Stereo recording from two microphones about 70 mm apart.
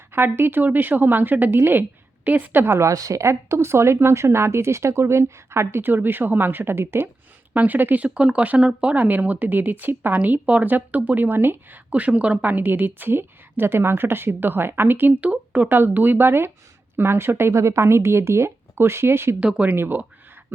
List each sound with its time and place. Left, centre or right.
0.1 s speech: right
2.8 s a woman's voice: right
3.2 s speech: right
7.5 s speech: right
15.7 s speech: right
19.4 s speech: centre
19.7 s speech: right